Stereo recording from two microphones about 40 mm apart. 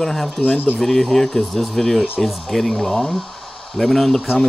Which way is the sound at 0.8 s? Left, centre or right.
Centre.